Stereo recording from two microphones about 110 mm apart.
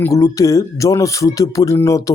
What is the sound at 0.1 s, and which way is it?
Speech, 30° left (ahead or behind).